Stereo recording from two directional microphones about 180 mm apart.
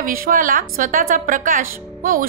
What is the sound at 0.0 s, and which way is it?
Speech, 50° right (ahead or behind).